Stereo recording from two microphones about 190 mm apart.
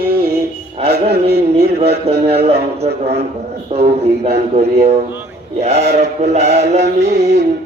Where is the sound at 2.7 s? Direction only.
35° right (ahead or behind).